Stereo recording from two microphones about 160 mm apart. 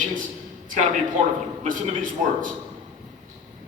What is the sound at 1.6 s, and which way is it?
Speech, 55° right (ahead or behind).